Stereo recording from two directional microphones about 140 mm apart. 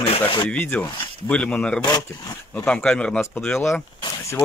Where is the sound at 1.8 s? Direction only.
25° left (ahead or behind).